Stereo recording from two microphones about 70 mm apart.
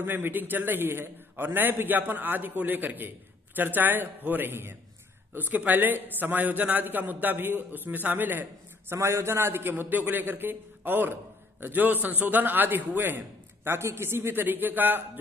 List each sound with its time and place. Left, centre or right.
0.0 s a man's voice: right
8.9 s a man's voice: right